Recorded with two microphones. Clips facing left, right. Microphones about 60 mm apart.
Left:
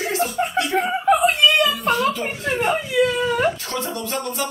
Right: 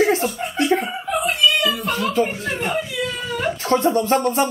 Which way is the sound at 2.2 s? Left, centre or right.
Centre.